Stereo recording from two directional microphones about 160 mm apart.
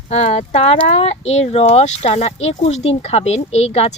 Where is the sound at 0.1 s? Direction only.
45° left (ahead or behind).